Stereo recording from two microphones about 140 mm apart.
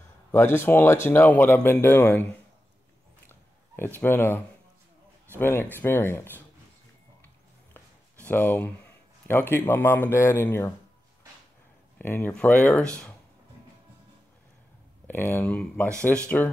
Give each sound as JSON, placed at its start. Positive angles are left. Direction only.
{"t": 0.3, "sound": "speech", "side_deg": 15}
{"t": 3.3, "sound": "a sound", "side_deg": 15}
{"t": 4.0, "sound": "speech", "side_deg": 15}
{"t": 7.7, "sound": "writing", "side_deg": 15}
{"t": 9.3, "sound": "speech", "side_deg": 15}
{"t": 12.0, "sound": "speech", "side_deg": 15}
{"t": 15.0, "sound": "speech", "side_deg": 15}
{"t": 15.6, "sound": "speech", "side_deg": 5}